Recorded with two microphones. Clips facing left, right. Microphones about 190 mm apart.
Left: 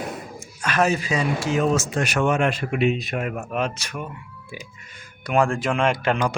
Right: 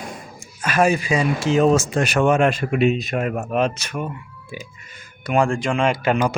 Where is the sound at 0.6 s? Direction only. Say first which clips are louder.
Right 3 dB; 10° right (ahead or behind).